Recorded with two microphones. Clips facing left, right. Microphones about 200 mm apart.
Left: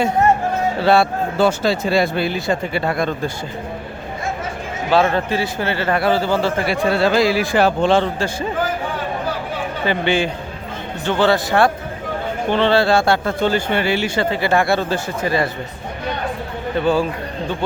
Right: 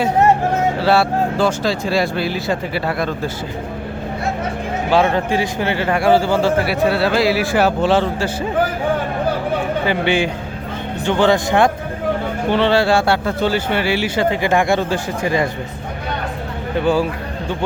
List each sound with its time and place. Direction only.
0.9 s speech: 5° right (ahead or behind)
4.9 s a man's voice: 15° right (ahead or behind)
9.8 s a man's voice: 10° right (ahead or behind)
16.8 s a man's voice: 10° right (ahead or behind)